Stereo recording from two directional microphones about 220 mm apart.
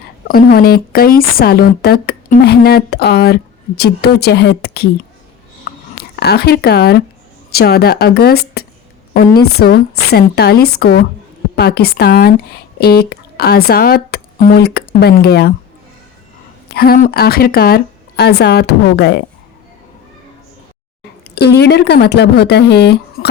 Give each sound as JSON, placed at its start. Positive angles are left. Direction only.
{"t": 0.3, "sound": "speech", "side_deg": 40}
{"t": 5.7, "sound": "a sound", "side_deg": 45}
{"t": 6.1, "sound": "speech", "side_deg": 45}
{"t": 16.7, "sound": "speech", "side_deg": 45}
{"t": 21.3, "sound": "speech", "side_deg": 50}